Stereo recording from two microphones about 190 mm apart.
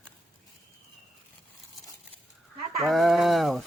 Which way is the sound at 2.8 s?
Centre (ahead or behind).